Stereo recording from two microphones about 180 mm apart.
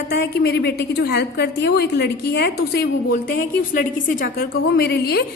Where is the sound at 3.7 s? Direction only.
50° left (ahead or behind).